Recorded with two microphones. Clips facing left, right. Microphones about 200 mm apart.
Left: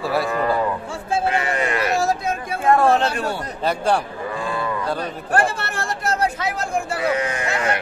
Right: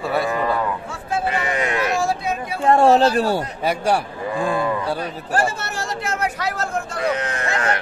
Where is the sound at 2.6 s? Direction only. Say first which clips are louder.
Right 3 dB; 30° right (ahead or behind).